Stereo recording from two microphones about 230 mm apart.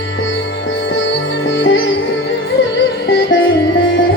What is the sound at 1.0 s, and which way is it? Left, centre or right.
Music, left.